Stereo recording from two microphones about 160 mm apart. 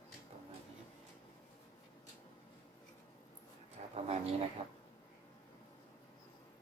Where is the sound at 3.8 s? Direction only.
50° right (ahead or behind).